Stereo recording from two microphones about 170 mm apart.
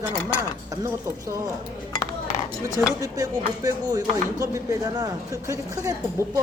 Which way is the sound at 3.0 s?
20° right (ahead or behind).